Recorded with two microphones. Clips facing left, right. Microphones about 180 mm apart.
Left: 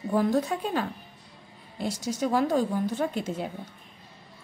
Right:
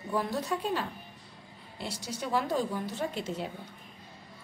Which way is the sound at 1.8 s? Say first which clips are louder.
Left 8 dB; 45° left (ahead or behind).